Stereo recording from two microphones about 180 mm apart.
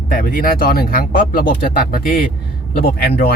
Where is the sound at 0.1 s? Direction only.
50° left (ahead or behind).